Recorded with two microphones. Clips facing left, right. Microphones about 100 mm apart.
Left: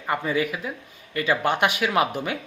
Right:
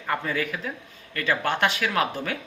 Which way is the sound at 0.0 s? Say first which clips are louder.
Left 3 dB; 15° left (ahead or behind).